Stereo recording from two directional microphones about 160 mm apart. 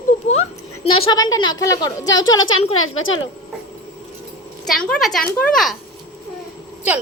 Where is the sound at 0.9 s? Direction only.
30° left (ahead or behind).